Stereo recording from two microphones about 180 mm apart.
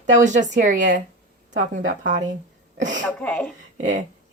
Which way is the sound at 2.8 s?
45° right (ahead or behind).